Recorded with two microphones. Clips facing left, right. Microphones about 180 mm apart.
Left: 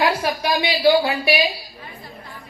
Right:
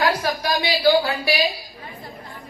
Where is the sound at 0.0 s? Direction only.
25° left (ahead or behind).